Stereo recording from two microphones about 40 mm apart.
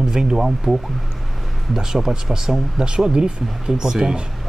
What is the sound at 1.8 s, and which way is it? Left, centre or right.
Speech, centre.